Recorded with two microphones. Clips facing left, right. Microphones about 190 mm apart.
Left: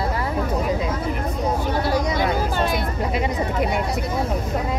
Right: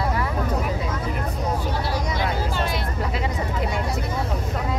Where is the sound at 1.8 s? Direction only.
50° left (ahead or behind).